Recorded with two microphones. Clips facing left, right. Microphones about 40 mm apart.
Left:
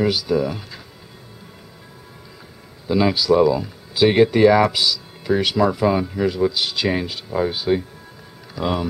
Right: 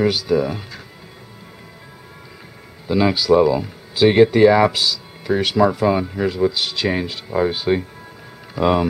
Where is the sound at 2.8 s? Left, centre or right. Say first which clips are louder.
Right 1 dB; centre.